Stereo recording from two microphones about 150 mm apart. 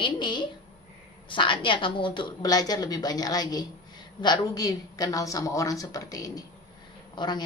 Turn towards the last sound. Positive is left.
turn(degrees=30)  # may be behind; listen again after turning